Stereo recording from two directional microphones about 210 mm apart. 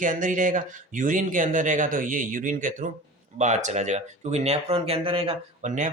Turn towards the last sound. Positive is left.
turn(degrees=-35)  # may be behind; listen again after turning